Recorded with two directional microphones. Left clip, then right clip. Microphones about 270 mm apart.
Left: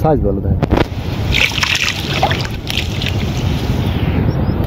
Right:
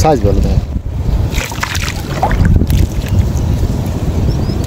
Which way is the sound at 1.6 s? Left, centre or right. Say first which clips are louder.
Left 4 dB; right.